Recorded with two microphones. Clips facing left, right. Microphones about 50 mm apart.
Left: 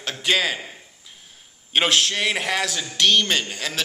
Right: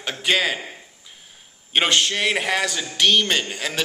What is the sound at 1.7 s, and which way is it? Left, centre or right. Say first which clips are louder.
Speech: even; centre.